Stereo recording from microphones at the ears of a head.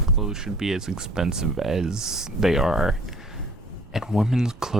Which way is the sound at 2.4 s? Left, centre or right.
Centre.